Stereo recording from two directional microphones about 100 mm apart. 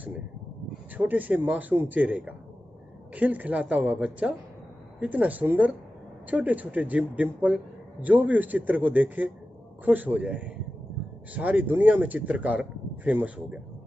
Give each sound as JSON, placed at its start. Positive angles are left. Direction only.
{"t": 0.9, "sound": "speech", "side_deg": -15}